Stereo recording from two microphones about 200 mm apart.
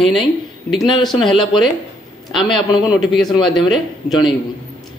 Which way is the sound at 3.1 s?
Centre (ahead or behind).